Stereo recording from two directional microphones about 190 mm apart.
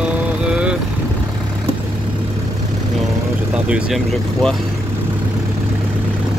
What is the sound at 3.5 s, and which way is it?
Speech, 5° right (ahead or behind).